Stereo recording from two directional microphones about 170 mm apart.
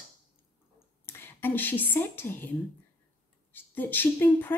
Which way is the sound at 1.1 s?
15° left (ahead or behind).